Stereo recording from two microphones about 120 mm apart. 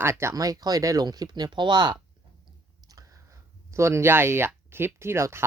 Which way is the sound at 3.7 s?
25° right (ahead or behind).